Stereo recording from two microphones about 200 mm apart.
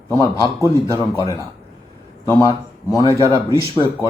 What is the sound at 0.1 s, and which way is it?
A man's voice, 20° left (ahead or behind).